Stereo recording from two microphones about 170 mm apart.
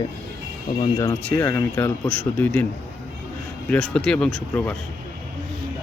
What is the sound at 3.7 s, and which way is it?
Speech, 5° left (ahead or behind).